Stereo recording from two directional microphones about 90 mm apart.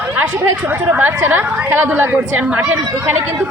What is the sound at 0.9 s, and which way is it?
A woman's voice, 20° right (ahead or behind).